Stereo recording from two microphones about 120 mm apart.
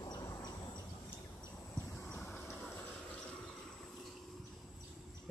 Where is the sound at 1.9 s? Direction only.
15° left (ahead or behind).